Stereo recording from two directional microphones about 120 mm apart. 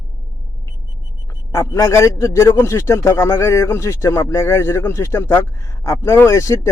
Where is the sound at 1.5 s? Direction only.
25° left (ahead or behind).